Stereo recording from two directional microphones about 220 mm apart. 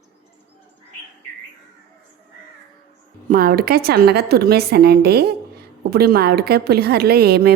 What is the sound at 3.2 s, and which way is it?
Speech, 40° right (ahead or behind).